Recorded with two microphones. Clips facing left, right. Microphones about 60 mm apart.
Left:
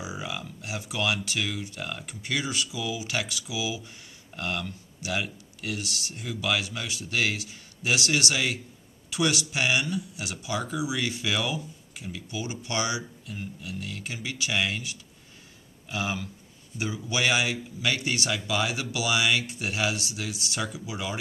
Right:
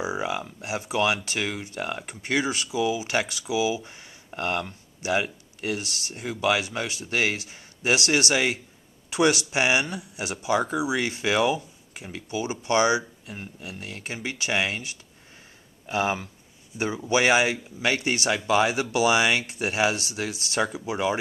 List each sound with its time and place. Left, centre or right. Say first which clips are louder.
0.0 s speech: right 7 dB; right